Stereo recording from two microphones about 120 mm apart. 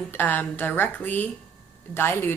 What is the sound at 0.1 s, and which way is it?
A woman's voice, 15° left (ahead or behind).